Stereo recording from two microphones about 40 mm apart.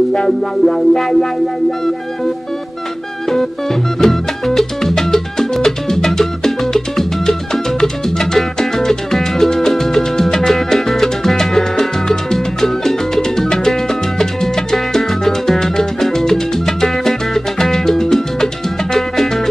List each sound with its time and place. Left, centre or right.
0.1 s music: left
0.7 s music: centre
4.0 s music: centre